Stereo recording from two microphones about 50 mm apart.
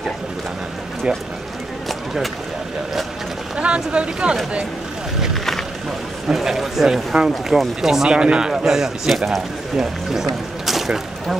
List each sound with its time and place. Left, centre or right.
3.5 s speech: right
5.3 s boat: centre
6.2 s speech: centre